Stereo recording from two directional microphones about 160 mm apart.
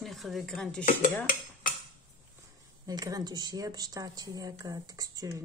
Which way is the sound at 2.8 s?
25° right (ahead or behind).